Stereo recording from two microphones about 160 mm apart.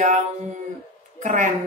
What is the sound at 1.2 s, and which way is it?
Speech, 50° right (ahead or behind).